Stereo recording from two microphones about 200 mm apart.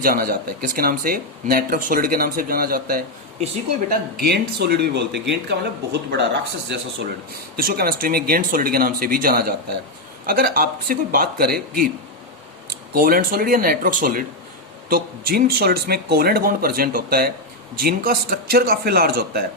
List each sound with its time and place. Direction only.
0.0 s speech: 45° right (ahead or behind)
3.4 s speech: 30° right (ahead or behind)
4.2 s speech: 55° right (ahead or behind)
7.5 s speech: 45° right (ahead or behind)